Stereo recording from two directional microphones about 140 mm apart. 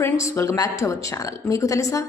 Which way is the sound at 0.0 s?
20° left (ahead or behind).